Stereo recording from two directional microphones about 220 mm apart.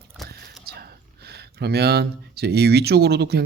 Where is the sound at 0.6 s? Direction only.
45° right (ahead or behind).